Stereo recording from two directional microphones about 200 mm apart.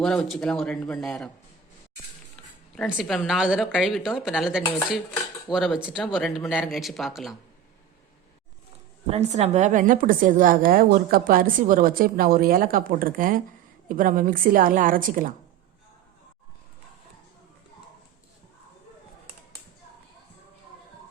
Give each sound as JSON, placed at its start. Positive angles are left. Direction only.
{"t": 0.0, "sound": "speech", "side_deg": 5}
{"t": 2.7, "sound": "speech", "side_deg": 0}
{"t": 4.6, "sound": "stir", "side_deg": 15}
{"t": 5.5, "sound": "speech", "side_deg": 0}
{"t": 9.0, "sound": "a woman's voice", "side_deg": -30}